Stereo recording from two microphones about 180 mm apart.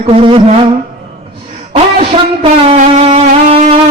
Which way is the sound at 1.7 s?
35° right (ahead or behind).